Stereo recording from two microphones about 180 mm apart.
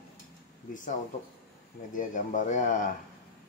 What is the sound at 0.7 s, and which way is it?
Speech, 45° left (ahead or behind).